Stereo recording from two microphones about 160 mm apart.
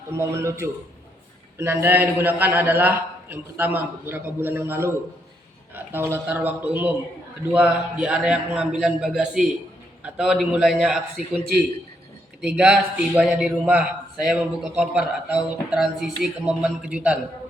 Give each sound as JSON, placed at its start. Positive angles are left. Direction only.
{"t": 0.1, "sound": "a man's voice", "side_deg": -15}
{"t": 12.5, "sound": "a man's voice", "side_deg": -5}